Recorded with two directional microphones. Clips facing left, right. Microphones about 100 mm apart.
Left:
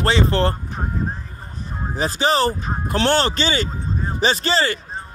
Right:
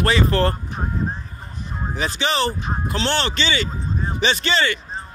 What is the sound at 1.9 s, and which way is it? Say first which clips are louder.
Speech: left 4 dB; 35° left (ahead or behind).